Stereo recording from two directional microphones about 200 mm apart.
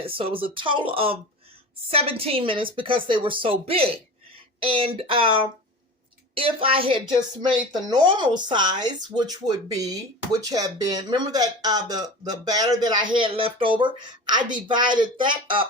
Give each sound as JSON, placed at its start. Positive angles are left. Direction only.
{"t": 0.0, "sound": "speech", "side_deg": -25}